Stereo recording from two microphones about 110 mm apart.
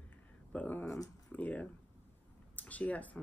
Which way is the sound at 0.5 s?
15° left (ahead or behind).